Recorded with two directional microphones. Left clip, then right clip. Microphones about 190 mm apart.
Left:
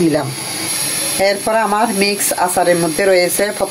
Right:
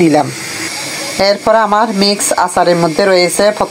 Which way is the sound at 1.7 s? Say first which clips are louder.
Right 4 dB; 15° right (ahead or behind).